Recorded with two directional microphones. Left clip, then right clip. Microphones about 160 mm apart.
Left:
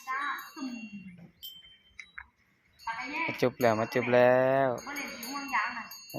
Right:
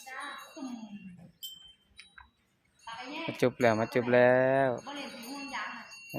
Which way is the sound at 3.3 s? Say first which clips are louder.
Right 1 dB; 20° right (ahead or behind).